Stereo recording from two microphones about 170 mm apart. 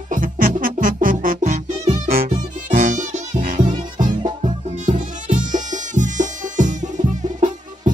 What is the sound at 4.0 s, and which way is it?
Music, 25° right (ahead or behind).